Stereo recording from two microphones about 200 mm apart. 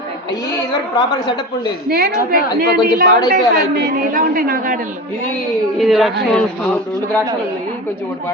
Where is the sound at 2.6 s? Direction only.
45° right (ahead or behind).